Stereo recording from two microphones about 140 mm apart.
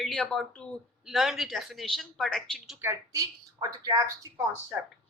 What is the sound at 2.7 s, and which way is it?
A woman's voice, 20° right (ahead or behind).